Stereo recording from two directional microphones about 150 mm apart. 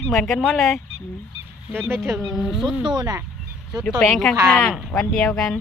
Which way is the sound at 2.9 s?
25° right (ahead or behind).